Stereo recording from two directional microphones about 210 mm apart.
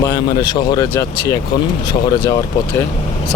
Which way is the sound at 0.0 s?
20° left (ahead or behind).